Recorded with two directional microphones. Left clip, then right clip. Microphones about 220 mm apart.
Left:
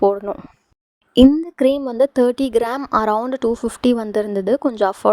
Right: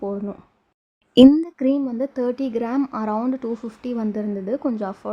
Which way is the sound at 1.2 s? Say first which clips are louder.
Even; centre (ahead or behind).